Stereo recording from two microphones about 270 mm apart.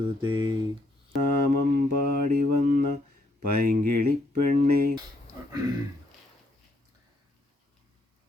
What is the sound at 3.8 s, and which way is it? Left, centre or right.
Speech, right.